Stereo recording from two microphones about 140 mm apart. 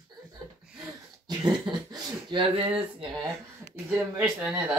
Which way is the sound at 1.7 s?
35° right (ahead or behind).